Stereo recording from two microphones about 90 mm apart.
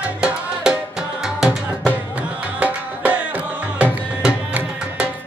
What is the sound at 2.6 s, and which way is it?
Music, 20° right (ahead or behind).